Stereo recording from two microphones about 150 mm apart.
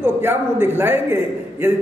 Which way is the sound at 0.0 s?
15° right (ahead or behind).